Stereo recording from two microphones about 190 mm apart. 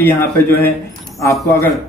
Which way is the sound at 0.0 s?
10° left (ahead or behind).